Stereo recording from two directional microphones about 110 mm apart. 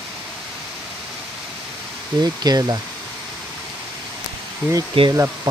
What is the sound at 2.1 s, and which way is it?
Speech, 35° right (ahead or behind).